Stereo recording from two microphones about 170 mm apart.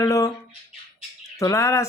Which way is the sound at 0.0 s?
20° left (ahead or behind).